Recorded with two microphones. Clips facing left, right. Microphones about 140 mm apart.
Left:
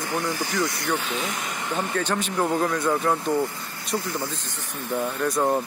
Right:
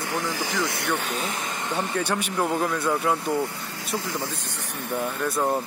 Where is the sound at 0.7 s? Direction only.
65° right (ahead or behind).